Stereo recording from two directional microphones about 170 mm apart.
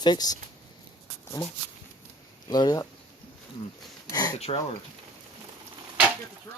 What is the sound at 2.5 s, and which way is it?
Speech, 25° left (ahead or behind).